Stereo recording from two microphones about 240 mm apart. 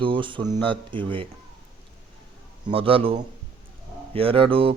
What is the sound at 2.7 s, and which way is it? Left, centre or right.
Speech, right.